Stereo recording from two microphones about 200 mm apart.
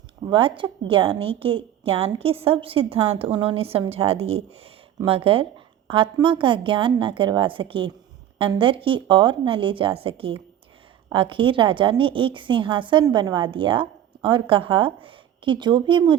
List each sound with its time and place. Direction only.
0.3 s a woman's voice: 25° right (ahead or behind)